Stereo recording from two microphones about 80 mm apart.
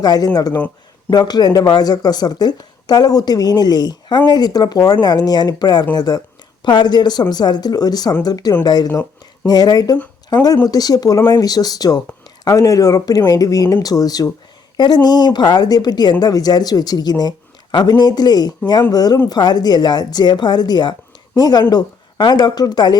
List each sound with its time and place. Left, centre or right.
0.0 s speech: left